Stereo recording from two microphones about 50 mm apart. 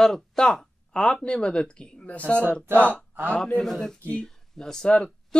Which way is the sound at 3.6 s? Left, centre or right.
Centre.